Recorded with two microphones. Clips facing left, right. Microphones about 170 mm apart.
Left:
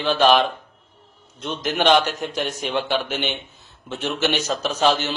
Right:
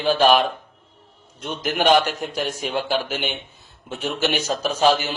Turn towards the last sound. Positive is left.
turn(degrees=-10)  # may be behind; listen again after turning